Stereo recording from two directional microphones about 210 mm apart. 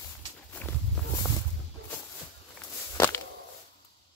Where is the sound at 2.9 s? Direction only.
15° left (ahead or behind).